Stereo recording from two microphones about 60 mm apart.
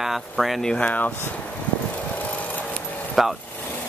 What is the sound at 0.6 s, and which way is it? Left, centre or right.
Speech, centre.